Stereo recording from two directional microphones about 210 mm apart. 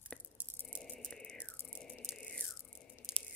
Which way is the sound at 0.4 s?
10° right (ahead or behind).